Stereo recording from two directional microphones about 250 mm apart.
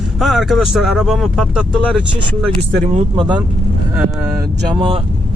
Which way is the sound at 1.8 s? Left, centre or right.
Right.